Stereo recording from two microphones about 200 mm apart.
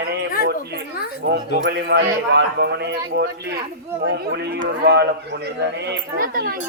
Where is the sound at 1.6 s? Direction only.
55° right (ahead or behind).